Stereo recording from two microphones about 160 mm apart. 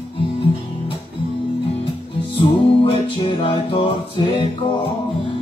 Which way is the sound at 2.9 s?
35° left (ahead or behind).